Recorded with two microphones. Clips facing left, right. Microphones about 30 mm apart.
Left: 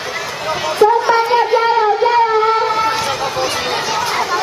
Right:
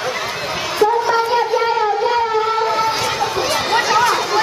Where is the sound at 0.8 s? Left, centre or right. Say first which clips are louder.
Left 4 dB; centre.